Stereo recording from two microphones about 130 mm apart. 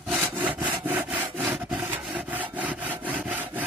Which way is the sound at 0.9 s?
15° right (ahead or behind).